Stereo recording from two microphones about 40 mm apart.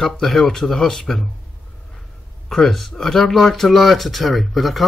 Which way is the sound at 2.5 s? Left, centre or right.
Centre.